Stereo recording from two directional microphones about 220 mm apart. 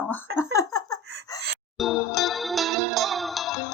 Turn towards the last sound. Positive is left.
turn(degrees=0)  # may be behind; listen again after turning